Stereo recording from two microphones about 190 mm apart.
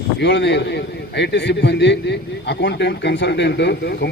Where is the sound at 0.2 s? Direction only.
70° left (ahead or behind).